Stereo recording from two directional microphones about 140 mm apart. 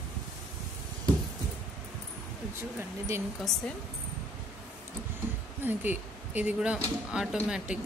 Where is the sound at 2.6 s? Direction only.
15° right (ahead or behind).